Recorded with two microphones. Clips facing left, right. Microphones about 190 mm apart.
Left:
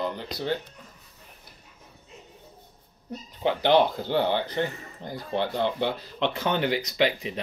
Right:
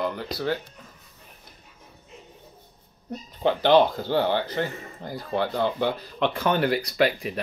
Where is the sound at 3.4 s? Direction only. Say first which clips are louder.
Right 2 dB; 15° left (ahead or behind).